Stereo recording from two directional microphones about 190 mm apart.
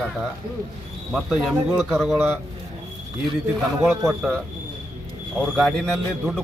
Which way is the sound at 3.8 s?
15° right (ahead or behind).